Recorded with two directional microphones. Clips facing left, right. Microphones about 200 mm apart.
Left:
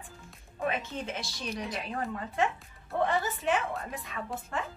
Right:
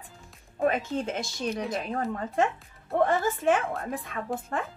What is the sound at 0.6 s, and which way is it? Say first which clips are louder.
A woman's voice: right 7 dB; 40° right (ahead or behind).